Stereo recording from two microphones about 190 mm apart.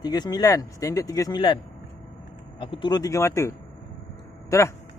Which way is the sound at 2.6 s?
25° left (ahead or behind).